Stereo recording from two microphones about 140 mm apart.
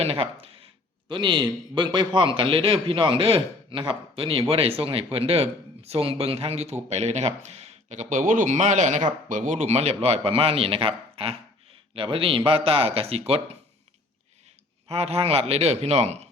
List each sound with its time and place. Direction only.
0.0 s speech: 45° right (ahead or behind)
14.8 s speech: 45° right (ahead or behind)